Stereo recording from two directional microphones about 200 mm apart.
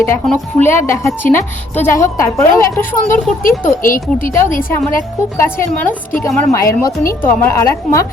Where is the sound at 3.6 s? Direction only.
45° left (ahead or behind).